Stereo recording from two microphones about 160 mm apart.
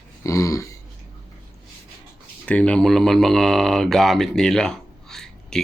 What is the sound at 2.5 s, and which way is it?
Speech, 10° left (ahead or behind).